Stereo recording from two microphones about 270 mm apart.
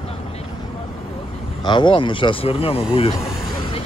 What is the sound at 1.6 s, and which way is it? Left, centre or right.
Speech, centre.